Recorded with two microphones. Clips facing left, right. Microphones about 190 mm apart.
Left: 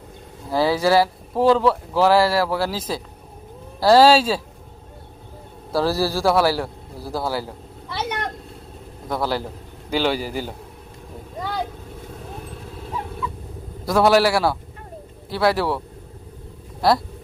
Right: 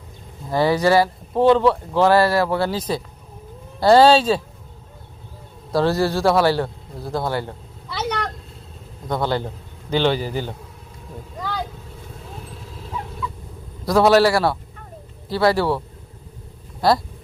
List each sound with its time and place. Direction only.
0.5 s speech: centre (ahead or behind)
5.7 s speech: 5° left (ahead or behind)
9.0 s a man's voice: 5° left (ahead or behind)
13.8 s speech: centre (ahead or behind)
16.8 s speech: centre (ahead or behind)